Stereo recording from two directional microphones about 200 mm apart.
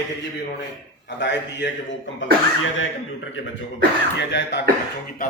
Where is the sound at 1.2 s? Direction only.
60° left (ahead or behind).